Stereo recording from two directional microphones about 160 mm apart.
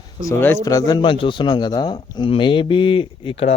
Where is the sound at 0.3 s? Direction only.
15° left (ahead or behind).